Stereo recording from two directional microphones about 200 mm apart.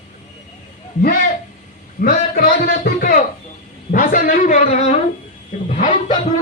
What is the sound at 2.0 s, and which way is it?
A man's voice, 45° left (ahead or behind).